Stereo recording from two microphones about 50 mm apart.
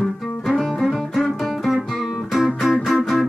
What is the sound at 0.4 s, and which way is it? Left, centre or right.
Music, centre.